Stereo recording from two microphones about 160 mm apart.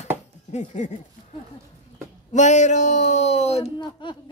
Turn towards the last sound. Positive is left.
turn(degrees=30)  # may be behind; listen again after turning